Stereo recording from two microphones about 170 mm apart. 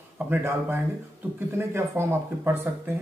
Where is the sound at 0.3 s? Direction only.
15° right (ahead or behind).